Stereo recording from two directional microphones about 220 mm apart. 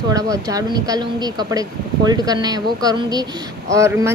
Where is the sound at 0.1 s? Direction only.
15° right (ahead or behind).